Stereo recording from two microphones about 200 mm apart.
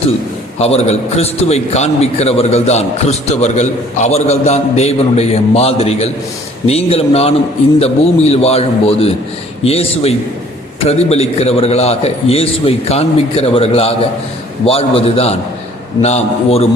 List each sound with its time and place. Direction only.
0.6 s a man's voice: 30° left (ahead or behind)